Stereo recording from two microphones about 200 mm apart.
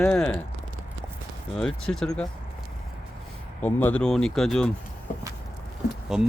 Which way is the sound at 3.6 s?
10° left (ahead or behind).